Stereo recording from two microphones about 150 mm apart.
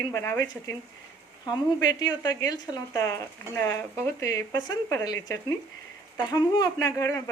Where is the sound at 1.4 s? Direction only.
25° left (ahead or behind).